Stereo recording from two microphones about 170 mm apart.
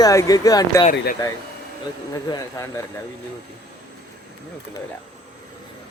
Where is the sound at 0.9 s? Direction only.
75° left (ahead or behind).